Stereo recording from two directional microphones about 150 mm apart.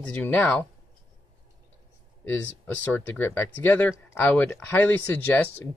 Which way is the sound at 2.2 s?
10° left (ahead or behind).